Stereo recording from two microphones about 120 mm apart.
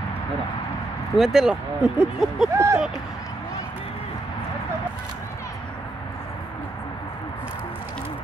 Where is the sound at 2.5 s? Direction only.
25° right (ahead or behind).